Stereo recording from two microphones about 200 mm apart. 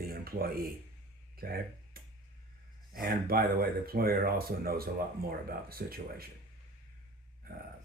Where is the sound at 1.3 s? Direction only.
50° right (ahead or behind).